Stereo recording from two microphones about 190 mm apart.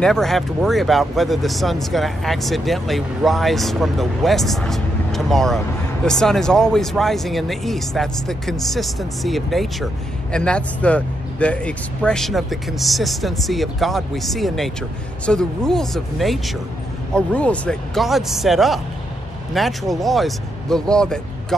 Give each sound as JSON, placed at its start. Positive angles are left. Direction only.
{"t": 0.0, "sound": "speech", "side_deg": 0}